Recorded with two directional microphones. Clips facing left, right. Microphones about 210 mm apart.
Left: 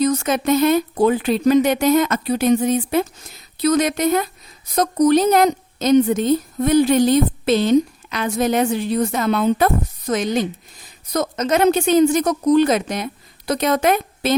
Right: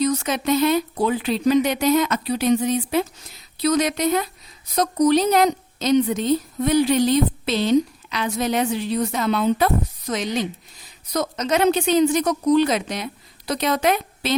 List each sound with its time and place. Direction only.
0.0 s a woman's voice: 50° left (ahead or behind)